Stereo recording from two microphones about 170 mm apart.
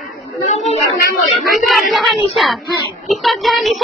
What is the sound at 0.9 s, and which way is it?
Music, centre (ahead or behind).